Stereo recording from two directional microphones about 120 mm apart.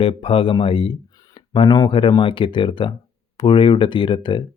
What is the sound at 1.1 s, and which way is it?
Speech, 30° left (ahead or behind).